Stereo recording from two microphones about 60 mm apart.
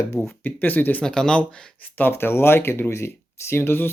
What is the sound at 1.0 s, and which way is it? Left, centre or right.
Speech, centre.